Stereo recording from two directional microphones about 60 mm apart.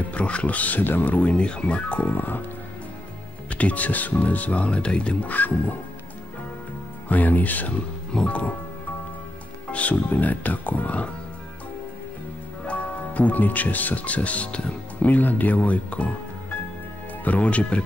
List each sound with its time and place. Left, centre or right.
0.1 s speech: left
1.3 s speech: centre
2.1 s speech: left
3.4 s speech: left
7.1 s speech: left
8.1 s speech: centre
9.7 s speech: left
12.6 s speech: left
17.2 s speech: left